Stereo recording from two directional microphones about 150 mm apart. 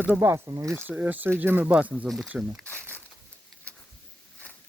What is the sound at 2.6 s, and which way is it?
Speech, 10° left (ahead or behind).